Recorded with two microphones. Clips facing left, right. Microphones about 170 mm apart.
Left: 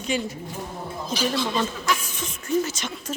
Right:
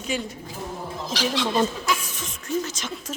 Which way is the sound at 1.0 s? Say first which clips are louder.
Left 1 dB; 90° right.